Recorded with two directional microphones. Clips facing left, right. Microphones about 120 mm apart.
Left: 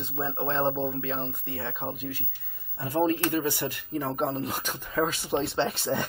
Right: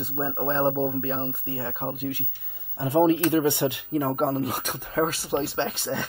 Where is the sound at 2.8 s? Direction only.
20° right (ahead or behind).